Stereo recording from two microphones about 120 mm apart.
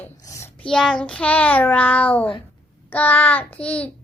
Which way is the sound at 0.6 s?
5° left (ahead or behind).